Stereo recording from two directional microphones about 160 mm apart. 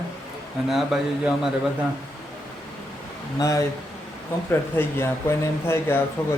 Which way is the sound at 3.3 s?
20° left (ahead or behind).